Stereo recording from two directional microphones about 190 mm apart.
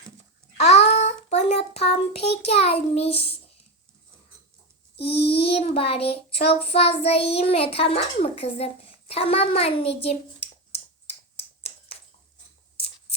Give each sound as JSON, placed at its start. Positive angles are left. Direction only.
{"t": 0.5, "sound": "child singing", "side_deg": 35}
{"t": 2.2, "sound": "a child's voice", "side_deg": 60}
{"t": 2.5, "sound": "child singing", "side_deg": 35}
{"t": 5.1, "sound": "child singing", "side_deg": 30}
{"t": 6.5, "sound": "a child's voice", "side_deg": 30}